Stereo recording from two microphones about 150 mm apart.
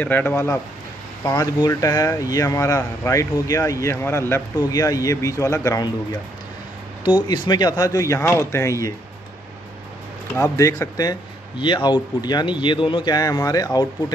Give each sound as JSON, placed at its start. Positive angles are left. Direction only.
{"t": 0.0, "sound": "speech", "side_deg": 10}
{"t": 1.2, "sound": "speech", "side_deg": 25}
{"t": 7.1, "sound": "speech", "side_deg": 30}
{"t": 10.3, "sound": "speech", "side_deg": 20}